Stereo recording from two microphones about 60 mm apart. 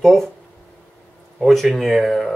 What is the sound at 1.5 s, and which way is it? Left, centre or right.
Speech, centre.